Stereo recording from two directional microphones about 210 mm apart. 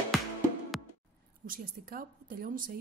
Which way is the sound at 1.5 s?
40° right (ahead or behind).